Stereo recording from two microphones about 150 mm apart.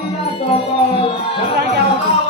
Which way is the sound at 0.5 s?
40° left (ahead or behind).